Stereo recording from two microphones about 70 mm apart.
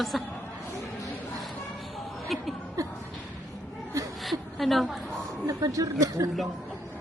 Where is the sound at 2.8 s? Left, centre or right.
Right.